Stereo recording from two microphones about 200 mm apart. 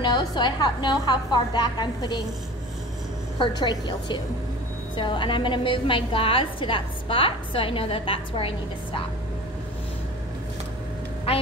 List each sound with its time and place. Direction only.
0.0 s a woman's voice: 20° left (ahead or behind)
3.3 s a woman's voice: 20° left (ahead or behind)